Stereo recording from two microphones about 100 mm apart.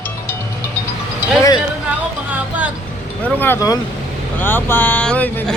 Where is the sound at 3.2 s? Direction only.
15° left (ahead or behind).